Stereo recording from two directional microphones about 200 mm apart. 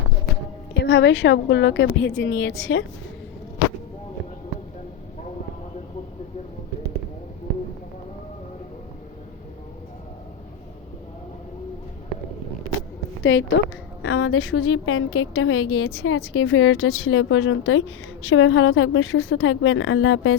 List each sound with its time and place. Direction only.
0.7 s a woman's voice: 65° left (ahead or behind)
13.3 s a woman's voice: 70° left (ahead or behind)
14.0 s a woman's voice: 85° left